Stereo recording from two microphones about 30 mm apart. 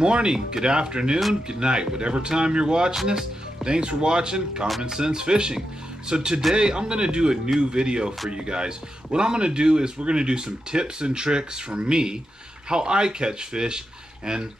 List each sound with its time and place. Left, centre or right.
0.0 s speech: right